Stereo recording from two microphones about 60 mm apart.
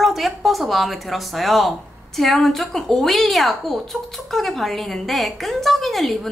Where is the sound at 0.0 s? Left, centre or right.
Centre.